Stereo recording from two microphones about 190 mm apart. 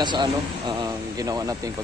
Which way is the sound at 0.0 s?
25° right (ahead or behind).